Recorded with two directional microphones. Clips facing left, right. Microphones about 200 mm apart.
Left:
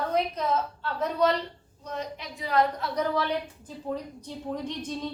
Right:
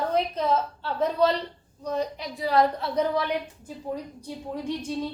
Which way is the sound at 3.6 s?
10° right (ahead or behind).